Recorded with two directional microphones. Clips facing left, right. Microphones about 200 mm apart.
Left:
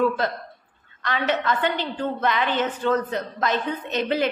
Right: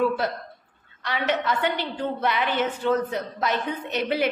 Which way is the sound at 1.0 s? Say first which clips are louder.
Left 1 dB; 10° right (ahead or behind).